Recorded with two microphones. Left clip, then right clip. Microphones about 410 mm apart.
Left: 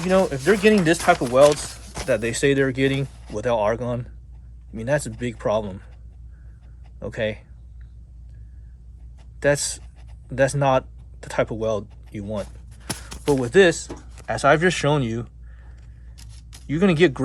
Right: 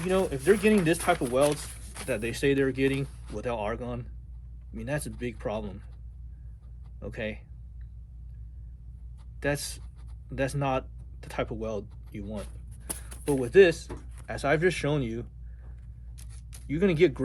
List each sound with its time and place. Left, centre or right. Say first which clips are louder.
0.0 s speech: left 7 dB; left
7.0 s speech: left 10 dB; centre
9.4 s speech: left 10 dB; centre
13.3 s speech: left 4 dB; centre
16.6 s speech: left 5 dB; centre